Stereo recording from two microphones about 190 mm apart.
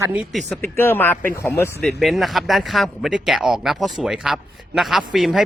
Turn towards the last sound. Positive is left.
turn(degrees=0)  # may be behind; listen again after turning